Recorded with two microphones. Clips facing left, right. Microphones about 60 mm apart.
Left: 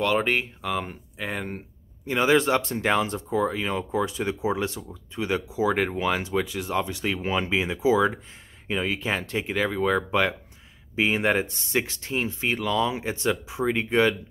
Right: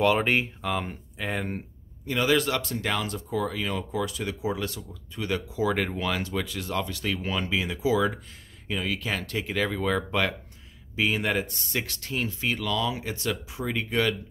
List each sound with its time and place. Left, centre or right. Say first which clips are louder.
0.0 s speech: right 1 dB; centre
2.0 s speech: left 3 dB; left